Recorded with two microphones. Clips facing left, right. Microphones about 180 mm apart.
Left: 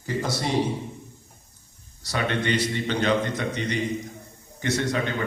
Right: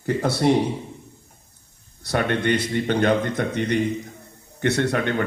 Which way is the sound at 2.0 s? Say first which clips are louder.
Right 4 dB; 55° right (ahead or behind).